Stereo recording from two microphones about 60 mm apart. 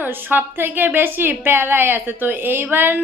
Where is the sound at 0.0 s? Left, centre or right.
Right.